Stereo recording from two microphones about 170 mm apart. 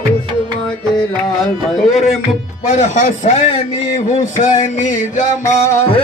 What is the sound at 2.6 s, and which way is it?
Speech, 45° left (ahead or behind).